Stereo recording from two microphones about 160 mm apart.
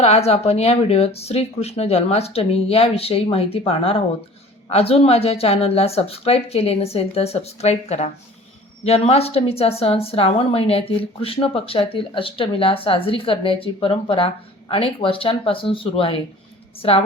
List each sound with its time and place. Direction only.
0.0 s a woman's voice: 40° left (ahead or behind)